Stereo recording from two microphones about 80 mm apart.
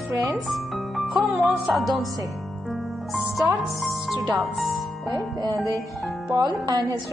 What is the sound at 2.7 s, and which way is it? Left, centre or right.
Music, centre.